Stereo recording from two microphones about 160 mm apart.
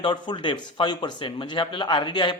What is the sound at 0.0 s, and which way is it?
Speech, 30° left (ahead or behind).